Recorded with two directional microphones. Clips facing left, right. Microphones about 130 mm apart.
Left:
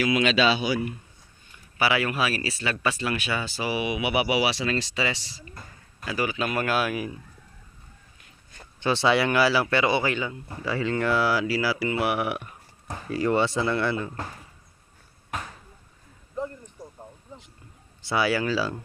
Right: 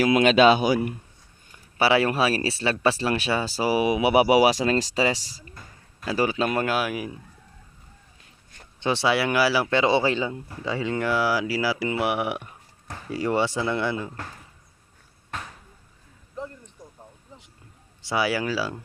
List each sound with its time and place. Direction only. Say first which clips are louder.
0.0 s speech: right 5 dB; 45° right (ahead or behind)
1.8 s speech: right 4 dB; 30° right (ahead or behind)
6.7 s speech: even; 15° right (ahead or behind)
8.8 s speech: left 1 dB; 15° right (ahead or behind)
18.1 s speech: left 1 dB; 10° right (ahead or behind)